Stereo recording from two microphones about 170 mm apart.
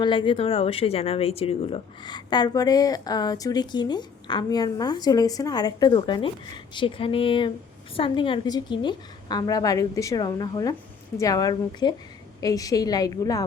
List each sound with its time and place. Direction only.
0.0 s speech: 30° left (ahead or behind)